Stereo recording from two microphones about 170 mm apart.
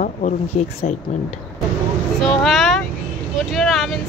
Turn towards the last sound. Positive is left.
turn(degrees=0)  # may be behind; listen again after turning